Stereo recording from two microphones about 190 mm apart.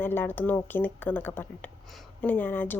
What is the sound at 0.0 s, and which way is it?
A woman's voice, 10° left (ahead or behind).